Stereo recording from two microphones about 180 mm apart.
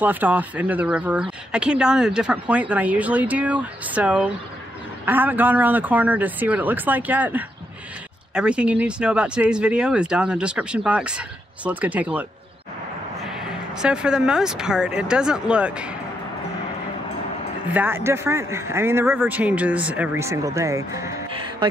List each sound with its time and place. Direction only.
0.0 s speech: 10° right (ahead or behind)
13.3 s speech: 5° right (ahead or behind)
17.7 s speech: 10° right (ahead or behind)